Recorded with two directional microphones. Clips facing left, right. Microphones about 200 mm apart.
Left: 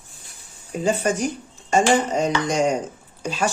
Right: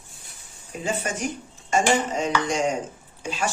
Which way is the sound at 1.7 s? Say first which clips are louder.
Left 4 dB; 40° left (ahead or behind).